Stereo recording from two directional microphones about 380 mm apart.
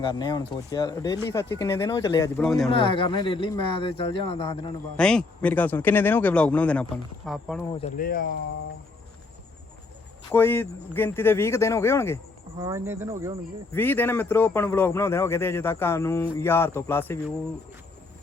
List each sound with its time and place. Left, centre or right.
0.0 s speech: centre
2.7 s speech: centre
4.9 s a man's voice: centre
7.7 s speech: centre
10.3 s speech: centre
12.5 s speech: centre
13.7 s a man's voice: centre